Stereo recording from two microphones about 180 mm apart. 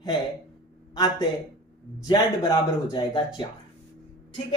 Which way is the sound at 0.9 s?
20° left (ahead or behind).